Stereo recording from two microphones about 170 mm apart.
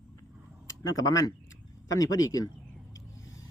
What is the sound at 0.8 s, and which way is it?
A man's voice, 20° left (ahead or behind).